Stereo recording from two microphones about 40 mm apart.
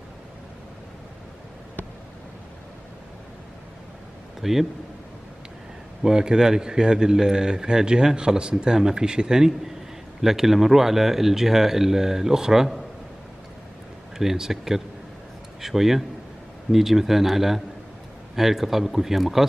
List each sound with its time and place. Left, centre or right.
4.4 s a man's voice: centre
6.0 s speech: centre
14.1 s speech: centre